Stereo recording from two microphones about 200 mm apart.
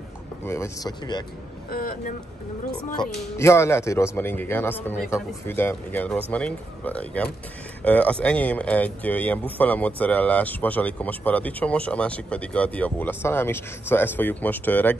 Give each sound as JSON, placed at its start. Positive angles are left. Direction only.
{"t": 0.5, "sound": "speech", "side_deg": 15}
{"t": 1.7, "sound": "speech", "side_deg": 45}
{"t": 3.3, "sound": "speech", "side_deg": 15}